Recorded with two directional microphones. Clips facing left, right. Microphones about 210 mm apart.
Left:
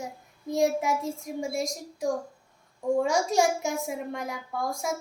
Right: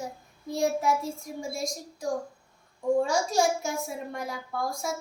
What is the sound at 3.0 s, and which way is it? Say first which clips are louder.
A child's voice: left 1 dB; 20° left (ahead or behind).